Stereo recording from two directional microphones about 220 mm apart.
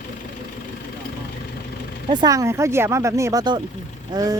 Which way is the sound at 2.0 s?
15° right (ahead or behind).